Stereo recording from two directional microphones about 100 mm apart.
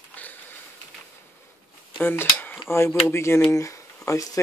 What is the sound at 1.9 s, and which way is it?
Speech, 20° left (ahead or behind).